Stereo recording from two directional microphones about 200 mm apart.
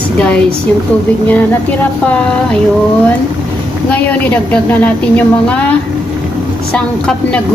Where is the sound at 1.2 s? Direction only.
10° left (ahead or behind).